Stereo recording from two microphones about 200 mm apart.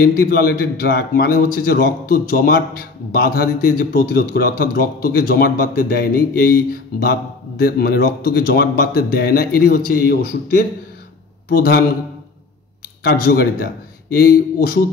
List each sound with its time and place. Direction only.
0.0 s a man's voice: 50° left (ahead or behind)
11.4 s a man's voice: 50° left (ahead or behind)
13.0 s a man's voice: 50° left (ahead or behind)